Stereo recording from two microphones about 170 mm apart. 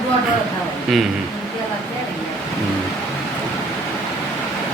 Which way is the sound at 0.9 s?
Centre (ahead or behind).